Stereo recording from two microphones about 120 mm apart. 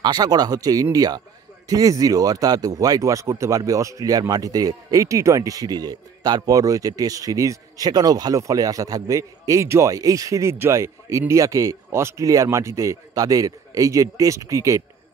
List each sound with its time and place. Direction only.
0.0 s speech: 35° right (ahead or behind)